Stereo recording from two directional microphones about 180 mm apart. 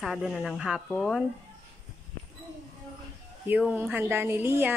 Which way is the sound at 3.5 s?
10° right (ahead or behind).